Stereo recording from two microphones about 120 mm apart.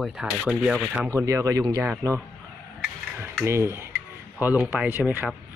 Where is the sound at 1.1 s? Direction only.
25° right (ahead or behind).